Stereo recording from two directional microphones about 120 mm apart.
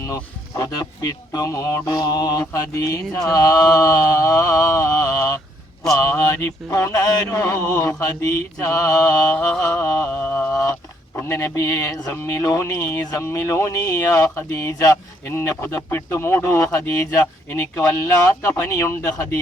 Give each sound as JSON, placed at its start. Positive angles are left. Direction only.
{"t": 0.6, "sound": "speech", "side_deg": 30}
{"t": 9.6, "sound": "a sound", "side_deg": 20}
{"t": 10.6, "sound": "speech", "side_deg": 20}